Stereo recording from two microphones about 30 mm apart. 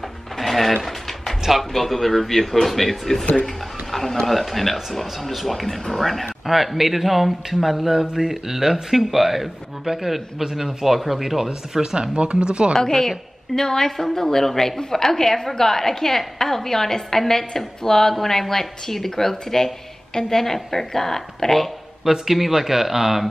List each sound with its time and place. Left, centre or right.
0.4 s mechanisms: centre
1.6 s a woman's voice: centre
3.9 s a sound: centre
4.3 s speech: centre
6.4 s a man's voice: centre
11.4 s speech: right
12.7 s a woman's voice: centre
22.0 s a man's voice: centre